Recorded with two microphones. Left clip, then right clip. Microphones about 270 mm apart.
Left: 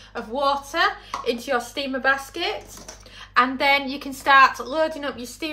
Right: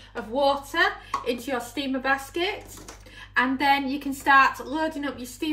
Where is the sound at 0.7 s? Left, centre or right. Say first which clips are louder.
Left 1 dB; left.